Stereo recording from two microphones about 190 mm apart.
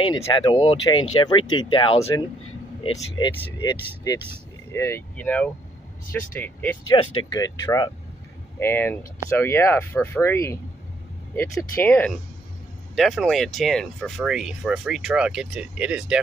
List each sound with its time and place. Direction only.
0.2 s speech: 20° left (ahead or behind)
6.8 s speech: 20° left (ahead or behind)
12.9 s speech: centre (ahead or behind)